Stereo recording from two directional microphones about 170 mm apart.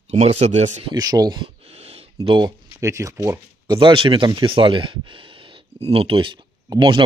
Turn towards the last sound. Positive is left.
turn(degrees=-30)  # may be behind; listen again after turning